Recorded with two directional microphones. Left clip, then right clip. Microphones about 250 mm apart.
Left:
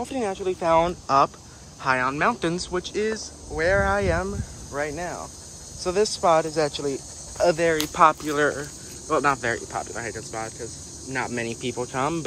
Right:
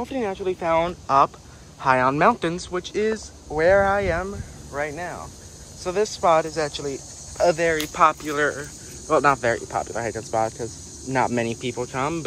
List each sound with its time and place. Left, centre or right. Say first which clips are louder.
0.0 s speech: right 1 dB; centre